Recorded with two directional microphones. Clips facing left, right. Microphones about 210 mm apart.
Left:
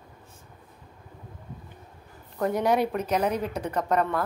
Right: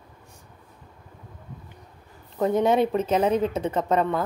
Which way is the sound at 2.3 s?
20° right (ahead or behind).